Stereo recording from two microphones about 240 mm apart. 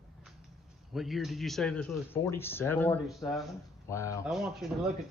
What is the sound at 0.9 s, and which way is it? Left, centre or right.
A man's voice, centre.